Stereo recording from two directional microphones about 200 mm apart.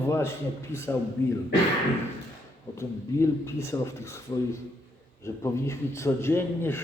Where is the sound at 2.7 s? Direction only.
15° left (ahead or behind).